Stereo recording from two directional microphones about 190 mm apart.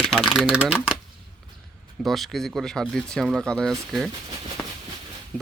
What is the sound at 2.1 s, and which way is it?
Speech, centre (ahead or behind).